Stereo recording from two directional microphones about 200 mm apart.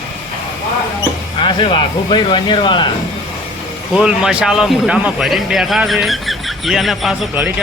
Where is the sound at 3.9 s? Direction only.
5° right (ahead or behind).